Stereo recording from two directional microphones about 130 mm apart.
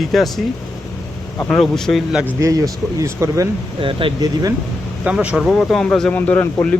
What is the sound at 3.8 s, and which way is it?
Speech, 45° right (ahead or behind).